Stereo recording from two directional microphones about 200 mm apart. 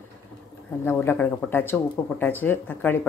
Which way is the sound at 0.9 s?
10° left (ahead or behind).